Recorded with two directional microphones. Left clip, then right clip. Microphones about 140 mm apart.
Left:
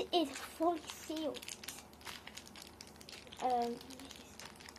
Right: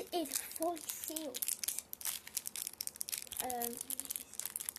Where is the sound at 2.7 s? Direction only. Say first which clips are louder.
Right 6 dB; 55° right (ahead or behind).